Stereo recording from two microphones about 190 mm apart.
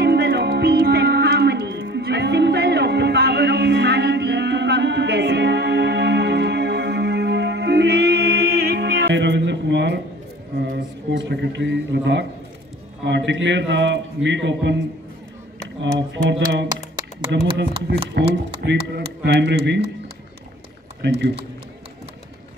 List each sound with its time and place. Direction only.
0.0 s music: 60° right (ahead or behind)
11.1 s a man's voice: 70° right (ahead or behind)
15.8 s a sound: 70° right (ahead or behind)
17.8 s speech: 65° right (ahead or behind)